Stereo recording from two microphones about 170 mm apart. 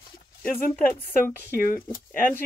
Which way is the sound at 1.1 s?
55° left (ahead or behind).